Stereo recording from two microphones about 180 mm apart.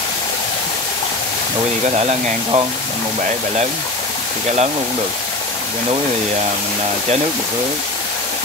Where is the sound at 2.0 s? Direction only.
35° right (ahead or behind).